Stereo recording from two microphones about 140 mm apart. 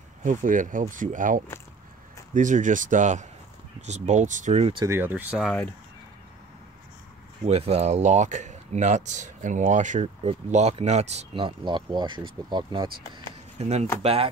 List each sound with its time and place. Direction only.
0.2 s speech: 70° right (ahead or behind)
4.8 s speech: 15° right (ahead or behind)
5.4 s speech: 10° left (ahead or behind)
7.4 s speech: 50° right (ahead or behind)
13.6 s speech: 50° right (ahead or behind)